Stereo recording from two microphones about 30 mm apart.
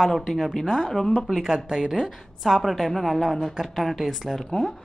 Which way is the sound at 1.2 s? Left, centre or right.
Centre.